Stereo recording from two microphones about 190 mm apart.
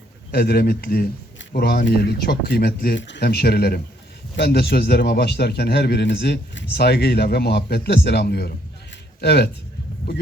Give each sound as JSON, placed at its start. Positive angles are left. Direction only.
{"t": 0.3, "sound": "a man's voice", "side_deg": 55}